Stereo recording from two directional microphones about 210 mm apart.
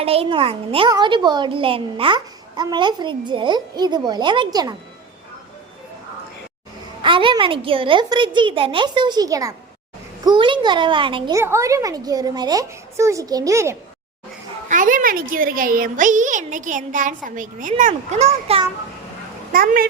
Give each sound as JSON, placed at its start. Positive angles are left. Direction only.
{"t": 0.0, "sound": "a child's voice", "side_deg": -30}
{"t": 7.0, "sound": "a child's voice", "side_deg": -25}
{"t": 14.7, "sound": "a woman's voice", "side_deg": -40}
{"t": 19.5, "sound": "a child's voice", "side_deg": -45}